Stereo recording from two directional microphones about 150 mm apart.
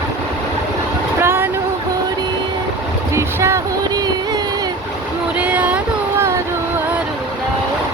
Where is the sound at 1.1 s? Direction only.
15° right (ahead or behind).